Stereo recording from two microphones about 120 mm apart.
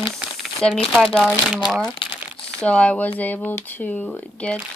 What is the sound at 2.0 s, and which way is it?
Crumpling, 45° left (ahead or behind).